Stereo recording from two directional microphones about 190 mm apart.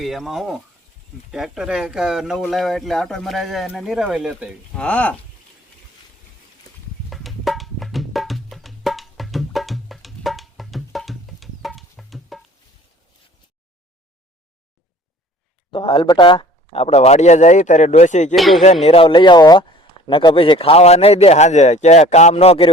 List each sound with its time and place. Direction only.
0.0 s speech: centre (ahead or behind)
4.7 s speech: 5° left (ahead or behind)
7.1 s music: centre (ahead or behind)
15.7 s a man's voice: 25° left (ahead or behind)
18.3 s speech: centre (ahead or behind)
18.6 s a man's voice: 35° left (ahead or behind)